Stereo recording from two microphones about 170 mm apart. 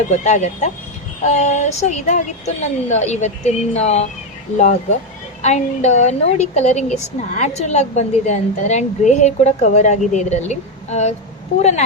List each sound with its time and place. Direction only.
0.1 s a woman's voice: 45° left (ahead or behind)
5.4 s a woman's voice: 40° left (ahead or behind)